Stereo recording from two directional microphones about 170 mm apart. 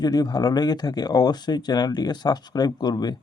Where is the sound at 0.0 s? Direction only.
20° left (ahead or behind).